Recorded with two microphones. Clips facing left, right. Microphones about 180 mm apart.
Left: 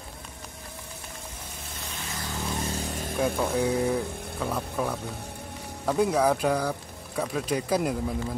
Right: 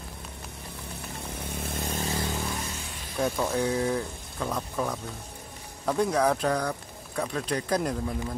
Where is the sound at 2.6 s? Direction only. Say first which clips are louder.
Left 7 dB; 40° left (ahead or behind).